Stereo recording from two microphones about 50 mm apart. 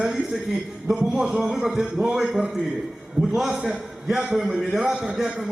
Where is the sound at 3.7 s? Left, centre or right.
Centre.